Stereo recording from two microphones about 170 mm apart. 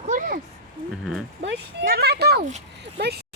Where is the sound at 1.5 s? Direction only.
65° right (ahead or behind).